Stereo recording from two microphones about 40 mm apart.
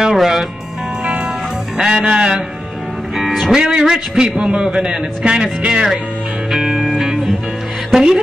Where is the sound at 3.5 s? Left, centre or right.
Centre.